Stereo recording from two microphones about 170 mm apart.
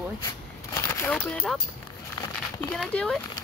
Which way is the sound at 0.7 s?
15° left (ahead or behind).